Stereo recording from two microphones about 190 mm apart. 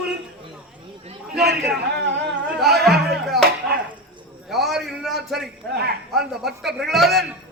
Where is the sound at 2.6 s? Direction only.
Centre (ahead or behind).